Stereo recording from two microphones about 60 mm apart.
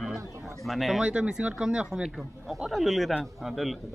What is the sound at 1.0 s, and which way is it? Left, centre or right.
Speech, centre.